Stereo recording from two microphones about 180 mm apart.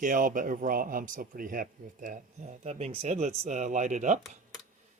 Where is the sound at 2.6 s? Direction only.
35° right (ahead or behind).